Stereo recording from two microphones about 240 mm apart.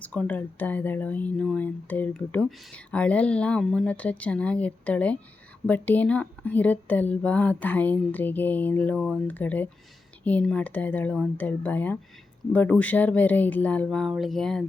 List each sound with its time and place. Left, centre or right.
0.0 s speech: centre